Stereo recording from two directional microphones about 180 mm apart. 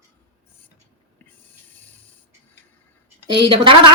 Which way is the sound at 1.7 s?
10° left (ahead or behind).